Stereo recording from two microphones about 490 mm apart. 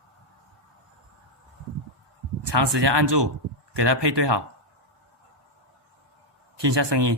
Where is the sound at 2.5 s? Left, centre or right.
Right.